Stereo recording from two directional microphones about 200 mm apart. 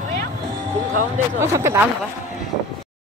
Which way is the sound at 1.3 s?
10° right (ahead or behind).